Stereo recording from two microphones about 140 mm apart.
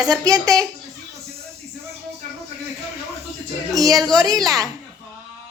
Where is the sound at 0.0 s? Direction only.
25° right (ahead or behind).